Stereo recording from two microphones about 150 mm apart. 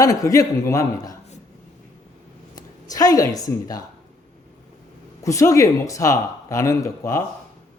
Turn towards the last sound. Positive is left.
turn(degrees=20)  # may be behind; listen again after turning